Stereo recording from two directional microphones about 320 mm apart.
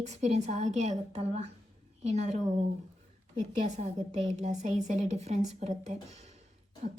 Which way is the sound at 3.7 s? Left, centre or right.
Right.